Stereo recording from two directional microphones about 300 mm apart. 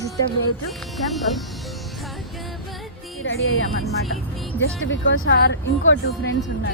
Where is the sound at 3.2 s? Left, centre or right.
Left.